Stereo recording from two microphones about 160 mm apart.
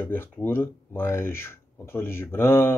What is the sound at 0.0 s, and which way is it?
Speech, 15° left (ahead or behind).